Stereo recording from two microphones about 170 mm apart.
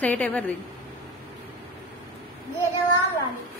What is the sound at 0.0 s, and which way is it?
Speech, 10° left (ahead or behind).